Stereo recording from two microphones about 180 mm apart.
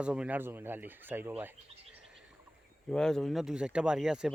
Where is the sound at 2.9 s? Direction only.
5° left (ahead or behind).